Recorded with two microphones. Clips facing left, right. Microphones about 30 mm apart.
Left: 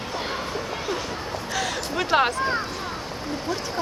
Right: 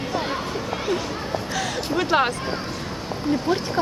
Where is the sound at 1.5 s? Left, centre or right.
Centre.